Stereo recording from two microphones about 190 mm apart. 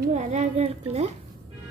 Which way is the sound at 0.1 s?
40° right (ahead or behind).